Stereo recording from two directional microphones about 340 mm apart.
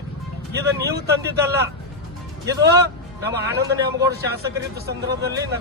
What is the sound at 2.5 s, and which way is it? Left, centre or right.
Speech, centre.